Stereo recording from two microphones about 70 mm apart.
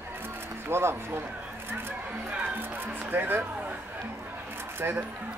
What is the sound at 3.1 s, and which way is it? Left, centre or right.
Speech, right.